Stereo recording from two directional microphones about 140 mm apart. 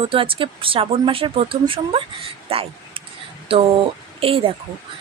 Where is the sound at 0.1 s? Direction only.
40° right (ahead or behind).